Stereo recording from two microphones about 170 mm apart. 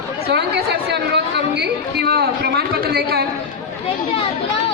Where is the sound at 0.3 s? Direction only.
70° right (ahead or behind).